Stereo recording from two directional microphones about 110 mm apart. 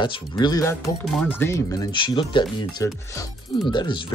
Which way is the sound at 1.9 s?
45° left (ahead or behind).